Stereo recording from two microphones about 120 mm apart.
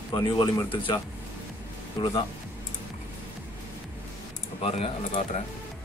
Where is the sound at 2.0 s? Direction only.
35° left (ahead or behind).